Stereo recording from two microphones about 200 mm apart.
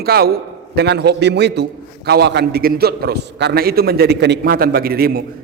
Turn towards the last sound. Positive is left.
turn(degrees=-50)  # may be behind; listen again after turning